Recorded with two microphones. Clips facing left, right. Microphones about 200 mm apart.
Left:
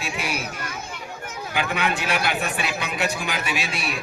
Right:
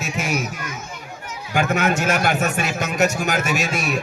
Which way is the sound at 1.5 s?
45° right (ahead or behind).